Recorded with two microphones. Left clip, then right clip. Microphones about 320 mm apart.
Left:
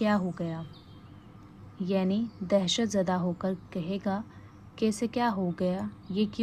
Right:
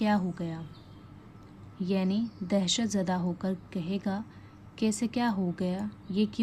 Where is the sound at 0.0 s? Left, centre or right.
Centre.